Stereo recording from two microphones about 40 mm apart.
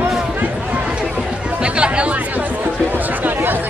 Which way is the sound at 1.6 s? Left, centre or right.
Right.